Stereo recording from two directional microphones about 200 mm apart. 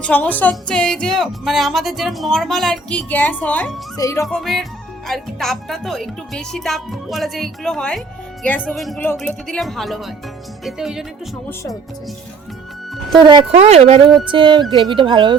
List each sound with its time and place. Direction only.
0.0 s a woman's voice: 5° left (ahead or behind)
4.3 s a woman's voice: centre (ahead or behind)
13.1 s speech: 20° right (ahead or behind)